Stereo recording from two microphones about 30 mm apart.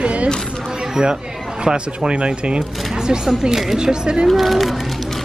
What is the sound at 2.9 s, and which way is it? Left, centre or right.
Speech, right.